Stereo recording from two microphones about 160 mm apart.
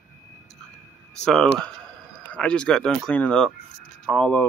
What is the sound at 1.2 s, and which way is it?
Speech, 5° left (ahead or behind).